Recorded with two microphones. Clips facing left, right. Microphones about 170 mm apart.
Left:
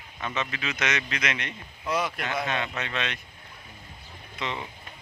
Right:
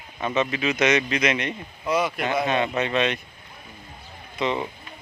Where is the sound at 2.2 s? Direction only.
20° right (ahead or behind).